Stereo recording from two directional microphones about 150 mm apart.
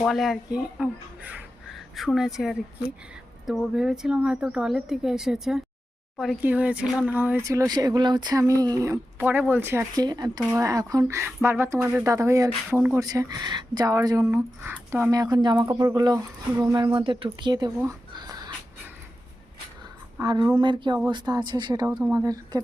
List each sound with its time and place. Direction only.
0.0 s a woman's voice: centre (ahead or behind)
13.0 s speech: 25° right (ahead or behind)
17.8 s a sound: 25° right (ahead or behind)
20.2 s speech: 30° right (ahead or behind)